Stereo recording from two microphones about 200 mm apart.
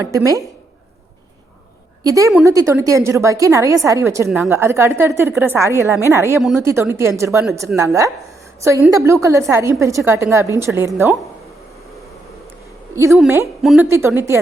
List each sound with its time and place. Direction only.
0.1 s a woman's voice: 15° right (ahead or behind)
2.0 s a woman's voice: 15° right (ahead or behind)
13.2 s a woman's voice: 15° right (ahead or behind)
13.6 s a woman's voice: centre (ahead or behind)
13.8 s a woman's voice: 15° right (ahead or behind)